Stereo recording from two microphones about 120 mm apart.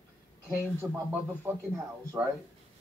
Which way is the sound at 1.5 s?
20° right (ahead or behind).